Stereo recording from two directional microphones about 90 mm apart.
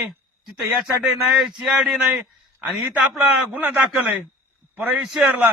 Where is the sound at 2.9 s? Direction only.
20° right (ahead or behind).